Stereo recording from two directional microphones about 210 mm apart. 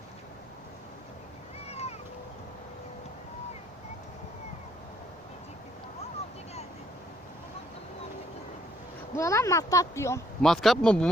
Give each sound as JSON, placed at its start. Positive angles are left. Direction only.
{"t": 1.6, "sound": "boat", "side_deg": 30}
{"t": 9.1, "sound": "speech", "side_deg": 15}
{"t": 10.4, "sound": "speech", "side_deg": 0}